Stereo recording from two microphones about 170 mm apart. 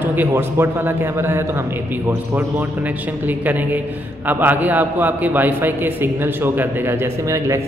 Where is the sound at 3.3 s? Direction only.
10° right (ahead or behind).